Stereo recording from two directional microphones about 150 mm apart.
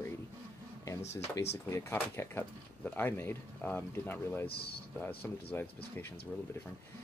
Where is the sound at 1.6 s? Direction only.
20° left (ahead or behind).